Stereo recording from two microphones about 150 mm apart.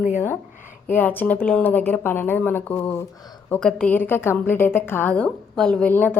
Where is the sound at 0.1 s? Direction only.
15° left (ahead or behind).